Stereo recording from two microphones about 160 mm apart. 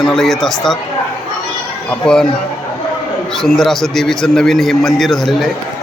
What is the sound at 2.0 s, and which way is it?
Speech, 5° left (ahead or behind).